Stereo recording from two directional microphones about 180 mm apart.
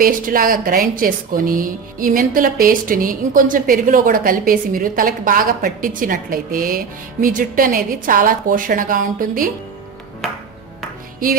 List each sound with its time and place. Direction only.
0.0 s speech: 50° right (ahead or behind)
10.2 s music: centre (ahead or behind)